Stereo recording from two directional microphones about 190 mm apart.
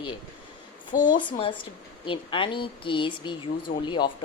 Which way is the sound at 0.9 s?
45° left (ahead or behind).